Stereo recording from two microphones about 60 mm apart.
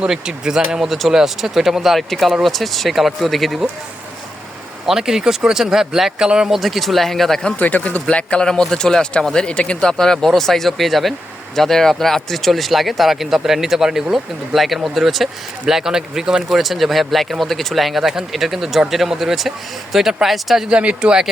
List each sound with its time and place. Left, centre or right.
0.1 s speech: centre
4.9 s speech: centre
6.6 s speech: centre
7.6 s speech: left; by 20.7 s centre
20.7 s speech: centre